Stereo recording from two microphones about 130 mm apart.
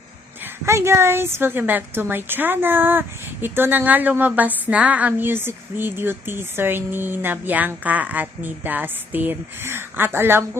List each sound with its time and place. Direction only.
0.6 s speech: 20° right (ahead or behind)